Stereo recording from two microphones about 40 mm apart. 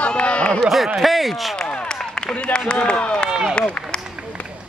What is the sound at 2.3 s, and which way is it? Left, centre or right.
Speech, left.